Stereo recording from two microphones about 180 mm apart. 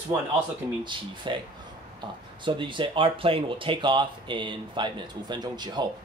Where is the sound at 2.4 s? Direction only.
25° right (ahead or behind).